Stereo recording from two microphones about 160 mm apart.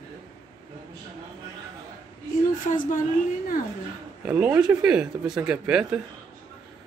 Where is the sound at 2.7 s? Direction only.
55° left (ahead or behind).